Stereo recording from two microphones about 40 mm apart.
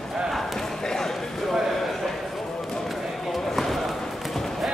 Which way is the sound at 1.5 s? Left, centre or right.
Centre.